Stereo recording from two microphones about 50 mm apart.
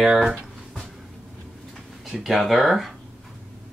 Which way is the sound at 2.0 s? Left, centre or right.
Centre.